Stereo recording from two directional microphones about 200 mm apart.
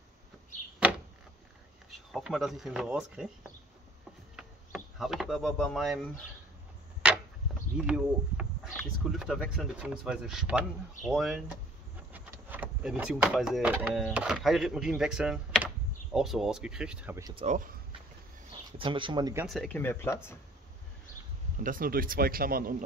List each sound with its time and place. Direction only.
0.8 s door: 10° right (ahead or behind)
1.9 s speech: centre (ahead or behind)
4.4 s speech: centre (ahead or behind)
7.0 s a sound: 5° right (ahead or behind)
7.7 s speech: 5° right (ahead or behind)
17.5 s speech: 40° right (ahead or behind)
18.8 s speech: 25° right (ahead or behind)
19.4 s speech: centre (ahead or behind)
21.6 s speech: 45° right (ahead or behind)